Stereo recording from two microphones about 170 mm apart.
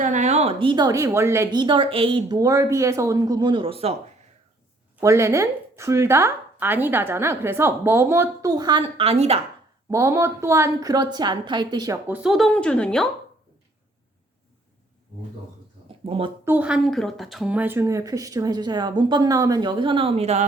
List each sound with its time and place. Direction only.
0.0 s speech: 45° right (ahead or behind)
4.9 s speech: 15° right (ahead or behind); by 9.4 s 35° right (ahead or behind)
9.9 s speech: 20° right (ahead or behind)
12.0 s speech: 5° right (ahead or behind)
16.0 s speech: 35° right (ahead or behind)
16.5 s speech: 5° right (ahead or behind); by 20.4 s 35° right (ahead or behind)